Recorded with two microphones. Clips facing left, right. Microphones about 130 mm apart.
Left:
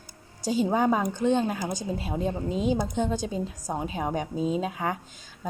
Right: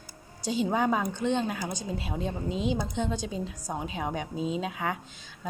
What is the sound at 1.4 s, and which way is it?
Speech, 15° left (ahead or behind).